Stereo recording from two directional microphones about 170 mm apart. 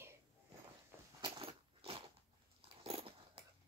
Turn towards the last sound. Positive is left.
turn(degrees=-35)  # may be behind; listen again after turning